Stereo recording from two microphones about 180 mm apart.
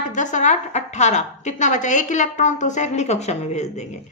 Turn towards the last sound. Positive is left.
turn(degrees=40)  # may be behind; listen again after turning